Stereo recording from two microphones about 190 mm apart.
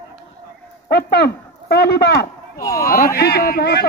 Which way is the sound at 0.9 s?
55° left (ahead or behind).